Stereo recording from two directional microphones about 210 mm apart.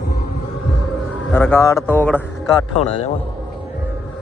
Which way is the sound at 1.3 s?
10° left (ahead or behind).